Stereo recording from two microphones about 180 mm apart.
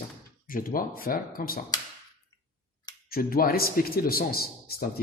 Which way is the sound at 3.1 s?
55° left (ahead or behind).